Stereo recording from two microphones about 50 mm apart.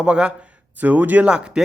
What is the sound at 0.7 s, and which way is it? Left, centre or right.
Speech, right.